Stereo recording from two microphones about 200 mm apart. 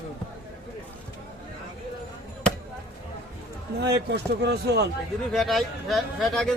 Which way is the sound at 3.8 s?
55° right (ahead or behind).